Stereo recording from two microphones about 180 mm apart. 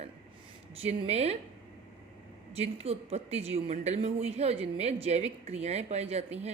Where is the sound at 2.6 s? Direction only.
35° right (ahead or behind).